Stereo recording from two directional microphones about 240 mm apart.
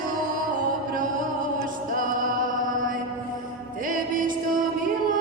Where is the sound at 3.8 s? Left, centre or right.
Right.